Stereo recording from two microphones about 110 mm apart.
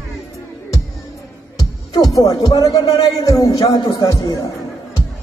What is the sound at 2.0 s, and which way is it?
Speech, 35° left (ahead or behind).